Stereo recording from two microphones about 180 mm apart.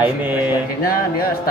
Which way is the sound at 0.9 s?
55° left (ahead or behind).